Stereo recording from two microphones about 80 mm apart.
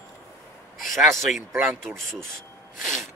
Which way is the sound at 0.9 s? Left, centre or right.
Centre.